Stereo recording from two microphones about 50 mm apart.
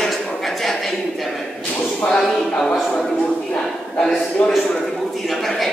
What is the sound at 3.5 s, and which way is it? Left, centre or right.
A man's voice, centre.